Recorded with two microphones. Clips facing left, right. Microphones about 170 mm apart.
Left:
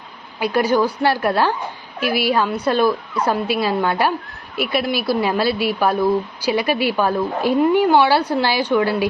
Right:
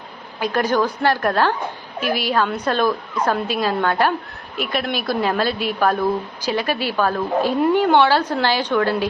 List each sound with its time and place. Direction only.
0.3 s a woman's voice: 10° left (ahead or behind)